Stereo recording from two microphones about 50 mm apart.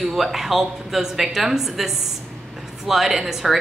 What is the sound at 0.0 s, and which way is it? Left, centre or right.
A woman's voice, centre.